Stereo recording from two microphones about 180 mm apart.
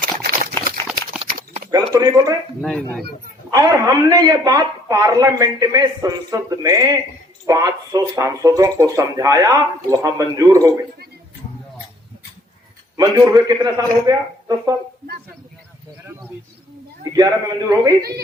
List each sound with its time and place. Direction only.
1.3 s a sound: 50° right (ahead or behind)
1.7 s speech: 20° right (ahead or behind)
2.6 s speech: 5° left (ahead or behind)
3.5 s speech: 20° right (ahead or behind)
13.0 s speech: 20° right (ahead or behind)
17.0 s speech: 20° right (ahead or behind)